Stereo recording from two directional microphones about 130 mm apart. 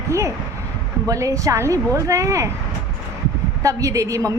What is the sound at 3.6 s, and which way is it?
Speech, 25° right (ahead or behind).